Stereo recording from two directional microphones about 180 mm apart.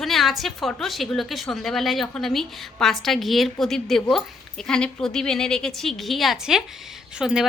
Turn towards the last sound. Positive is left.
turn(degrees=-5)  # may be behind; listen again after turning